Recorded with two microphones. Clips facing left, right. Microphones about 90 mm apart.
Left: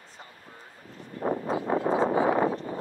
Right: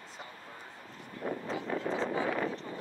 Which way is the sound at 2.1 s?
30° left (ahead or behind).